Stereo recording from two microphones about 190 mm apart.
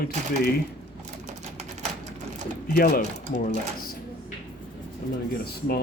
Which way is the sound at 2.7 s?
50° left (ahead or behind).